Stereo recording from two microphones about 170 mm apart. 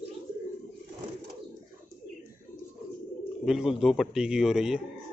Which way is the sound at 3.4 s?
5° right (ahead or behind).